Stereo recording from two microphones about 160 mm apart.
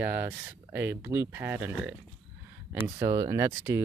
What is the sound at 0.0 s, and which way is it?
Speech, 10° right (ahead or behind).